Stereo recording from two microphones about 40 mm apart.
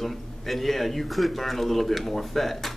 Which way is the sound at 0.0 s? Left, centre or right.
Centre.